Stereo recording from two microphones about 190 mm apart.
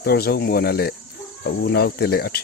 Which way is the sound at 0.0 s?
55° left (ahead or behind).